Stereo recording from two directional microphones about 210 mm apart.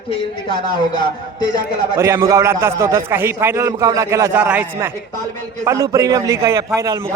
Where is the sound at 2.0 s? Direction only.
15° right (ahead or behind).